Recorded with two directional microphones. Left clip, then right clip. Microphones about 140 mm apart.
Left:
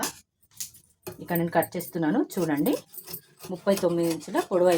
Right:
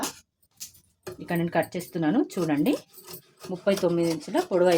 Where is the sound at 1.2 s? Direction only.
20° right (ahead or behind).